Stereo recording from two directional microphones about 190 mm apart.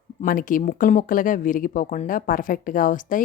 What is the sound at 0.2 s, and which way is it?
Speech, 45° left (ahead or behind).